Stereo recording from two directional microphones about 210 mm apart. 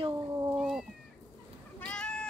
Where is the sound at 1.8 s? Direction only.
5° left (ahead or behind).